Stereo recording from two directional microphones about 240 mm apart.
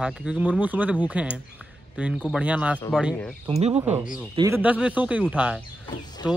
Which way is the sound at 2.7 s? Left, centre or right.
Centre.